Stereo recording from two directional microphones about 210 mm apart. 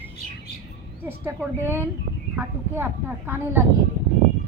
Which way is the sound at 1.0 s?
10° right (ahead or behind).